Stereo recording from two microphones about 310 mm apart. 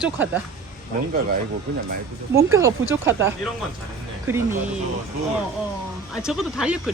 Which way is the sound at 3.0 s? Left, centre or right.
Centre.